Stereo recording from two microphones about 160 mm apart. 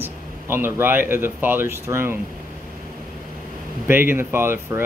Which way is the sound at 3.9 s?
15° right (ahead or behind).